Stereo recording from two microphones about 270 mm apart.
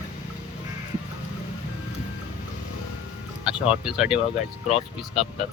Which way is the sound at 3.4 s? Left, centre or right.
Centre.